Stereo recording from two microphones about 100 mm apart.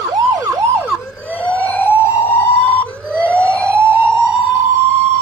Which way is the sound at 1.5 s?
15° left (ahead or behind).